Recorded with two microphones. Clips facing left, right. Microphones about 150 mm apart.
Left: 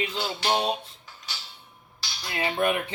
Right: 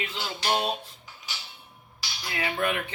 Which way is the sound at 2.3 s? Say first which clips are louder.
Left 3 dB; 25° left (ahead or behind).